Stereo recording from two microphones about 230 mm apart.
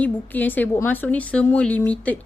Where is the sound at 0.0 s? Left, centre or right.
Centre.